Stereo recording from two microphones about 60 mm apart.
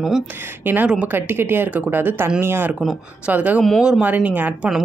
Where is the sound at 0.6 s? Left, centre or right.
Right.